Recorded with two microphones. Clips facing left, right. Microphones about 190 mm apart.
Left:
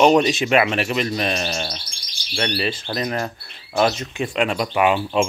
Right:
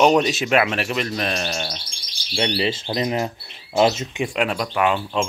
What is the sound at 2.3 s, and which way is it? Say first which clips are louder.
Speech: right 2 dB; 20° right (ahead or behind).